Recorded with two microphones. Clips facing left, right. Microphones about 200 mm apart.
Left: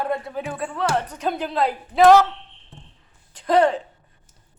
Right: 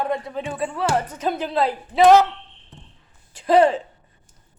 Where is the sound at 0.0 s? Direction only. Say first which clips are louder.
Right 1 dB; 5° left (ahead or behind).